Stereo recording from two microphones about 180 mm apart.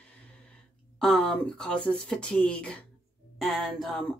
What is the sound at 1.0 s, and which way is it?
Speech, 5° left (ahead or behind).